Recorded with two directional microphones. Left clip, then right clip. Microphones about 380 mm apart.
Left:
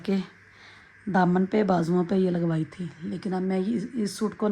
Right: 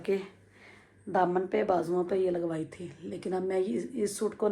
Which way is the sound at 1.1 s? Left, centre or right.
Left.